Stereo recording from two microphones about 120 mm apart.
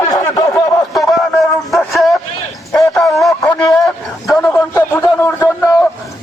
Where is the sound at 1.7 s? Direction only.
Centre (ahead or behind).